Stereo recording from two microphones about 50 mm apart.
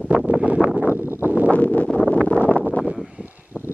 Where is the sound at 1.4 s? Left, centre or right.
Left.